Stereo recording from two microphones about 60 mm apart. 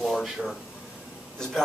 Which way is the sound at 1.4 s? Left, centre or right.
Centre.